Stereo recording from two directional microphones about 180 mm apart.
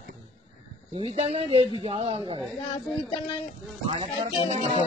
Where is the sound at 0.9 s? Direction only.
35° right (ahead or behind).